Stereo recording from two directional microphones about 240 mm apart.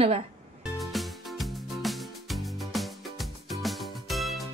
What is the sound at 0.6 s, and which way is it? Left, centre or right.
Music, centre.